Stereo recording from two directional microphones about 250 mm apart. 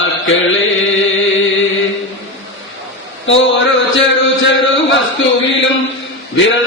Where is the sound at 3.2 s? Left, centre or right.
Left.